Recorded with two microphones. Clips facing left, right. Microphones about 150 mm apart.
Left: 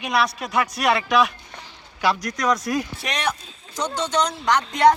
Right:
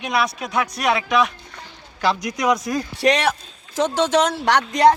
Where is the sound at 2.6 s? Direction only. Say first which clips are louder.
Right 1 dB; centre (ahead or behind).